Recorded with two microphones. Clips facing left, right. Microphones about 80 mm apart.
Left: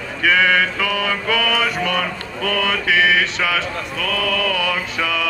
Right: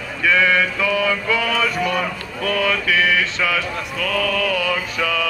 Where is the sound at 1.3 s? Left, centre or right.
Left.